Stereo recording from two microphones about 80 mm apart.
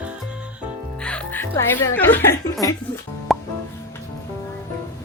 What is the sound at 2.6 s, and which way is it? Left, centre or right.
Speech, left.